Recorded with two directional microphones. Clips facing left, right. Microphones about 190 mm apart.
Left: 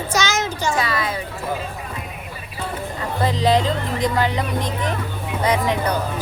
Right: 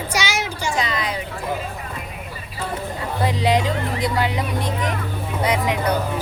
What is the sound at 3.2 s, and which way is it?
Music, 10° right (ahead or behind).